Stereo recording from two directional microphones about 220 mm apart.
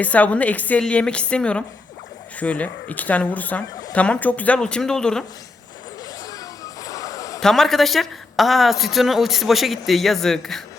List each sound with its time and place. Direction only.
0.0 s a woman's voice: 5° left (ahead or behind)
6.8 s a sound: 15° left (ahead or behind)
7.3 s a woman's voice: centre (ahead or behind)